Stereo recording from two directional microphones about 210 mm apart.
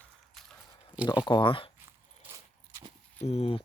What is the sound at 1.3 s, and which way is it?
Speech, 25° left (ahead or behind).